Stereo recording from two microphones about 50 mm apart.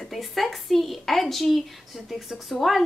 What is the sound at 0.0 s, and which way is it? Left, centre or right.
A woman's voice, centre.